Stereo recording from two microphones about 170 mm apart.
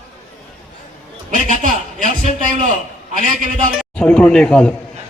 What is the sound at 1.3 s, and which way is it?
A man's voice, 50° right (ahead or behind).